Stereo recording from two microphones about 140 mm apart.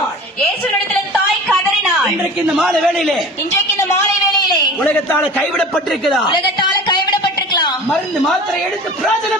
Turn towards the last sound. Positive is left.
turn(degrees=30)  # may be behind; listen again after turning